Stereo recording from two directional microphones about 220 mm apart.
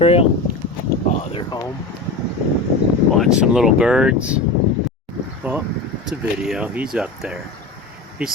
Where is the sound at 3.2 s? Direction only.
5° right (ahead or behind).